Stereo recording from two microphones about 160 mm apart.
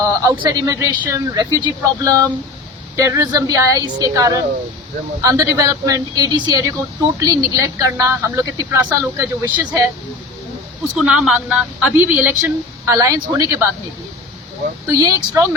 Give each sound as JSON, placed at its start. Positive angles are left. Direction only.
{"t": 0.0, "sound": "speech", "side_deg": -20}
{"t": 10.9, "sound": "a woman's voice", "side_deg": -5}
{"t": 14.8, "sound": "speech", "side_deg": -20}